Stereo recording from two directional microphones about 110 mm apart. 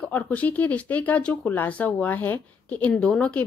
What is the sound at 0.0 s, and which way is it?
Speech, 15° left (ahead or behind).